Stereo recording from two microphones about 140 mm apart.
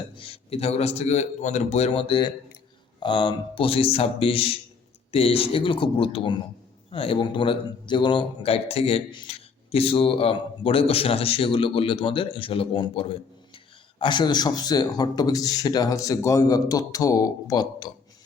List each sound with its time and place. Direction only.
0.2 s a man's voice: 45° left (ahead or behind)